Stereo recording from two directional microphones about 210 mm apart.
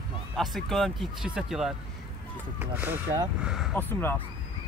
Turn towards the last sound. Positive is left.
turn(degrees=10)  # may be behind; listen again after turning